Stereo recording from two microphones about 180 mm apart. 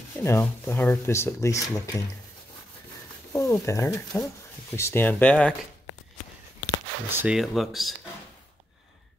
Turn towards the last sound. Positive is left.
turn(degrees=0)  # may be behind; listen again after turning